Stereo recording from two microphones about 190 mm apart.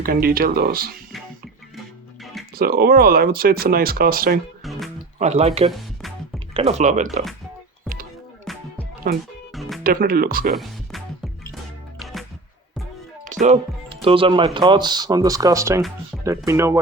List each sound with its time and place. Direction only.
0.0 s speech: 50° right (ahead or behind)
2.6 s speech: 50° right (ahead or behind)
4.6 s music: centre (ahead or behind)
5.2 s speech: 35° right (ahead or behind)
5.7 s music: centre (ahead or behind)
6.5 s speech: 30° right (ahead or behind)
8.5 s music: centre (ahead or behind)
9.1 s speech: 55° right (ahead or behind)
9.6 s music: centre (ahead or behind)
9.8 s speech: 50° right (ahead or behind)
10.5 s music: centre (ahead or behind)
13.9 s speech: 30° right (ahead or behind)
16.1 s music: centre (ahead or behind)
16.5 s speech: 15° right (ahead or behind)